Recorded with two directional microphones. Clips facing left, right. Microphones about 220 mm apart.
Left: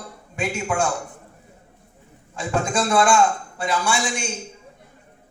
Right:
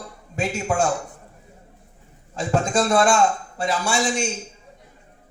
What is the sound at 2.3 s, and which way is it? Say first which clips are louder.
A man's voice: right 2 dB; 40° right (ahead or behind).